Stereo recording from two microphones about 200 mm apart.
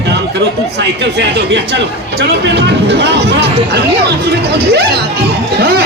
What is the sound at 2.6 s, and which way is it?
Speech, 60° right (ahead or behind).